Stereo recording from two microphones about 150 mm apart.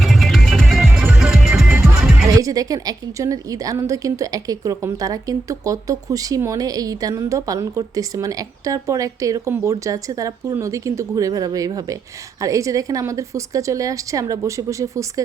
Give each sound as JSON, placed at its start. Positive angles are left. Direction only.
{"t": 0.0, "sound": "music", "side_deg": 0}
{"t": 2.3, "sound": "a woman's voice", "side_deg": -25}